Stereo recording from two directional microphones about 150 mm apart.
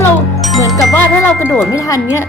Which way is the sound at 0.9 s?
15° left (ahead or behind).